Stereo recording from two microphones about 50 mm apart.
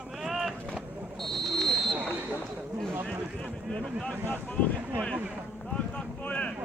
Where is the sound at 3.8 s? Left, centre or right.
Centre.